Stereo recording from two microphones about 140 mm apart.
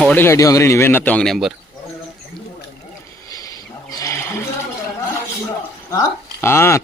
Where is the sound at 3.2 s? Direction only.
25° left (ahead or behind).